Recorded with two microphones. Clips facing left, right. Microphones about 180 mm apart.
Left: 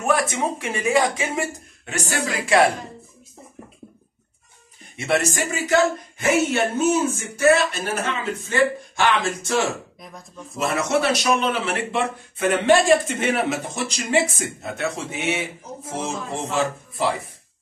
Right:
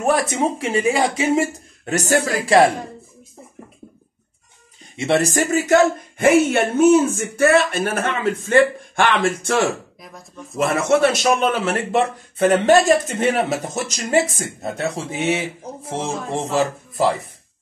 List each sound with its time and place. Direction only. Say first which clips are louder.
0.0 s speech: right 3 dB; 30° right (ahead or behind)
1.9 s a man's voice: right 7 dB; 45° right (ahead or behind)
4.9 s speech: right 4 dB; 30° right (ahead or behind)
5.7 s speech: right 2 dB; 55° right (ahead or behind)
9.9 s speech: even; centre (ahead or behind)
10.6 s a man's voice: right 5 dB; 55° right (ahead or behind); by 15.4 s 35° right (ahead or behind)